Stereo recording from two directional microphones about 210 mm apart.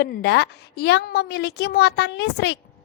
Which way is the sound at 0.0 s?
50° left (ahead or behind).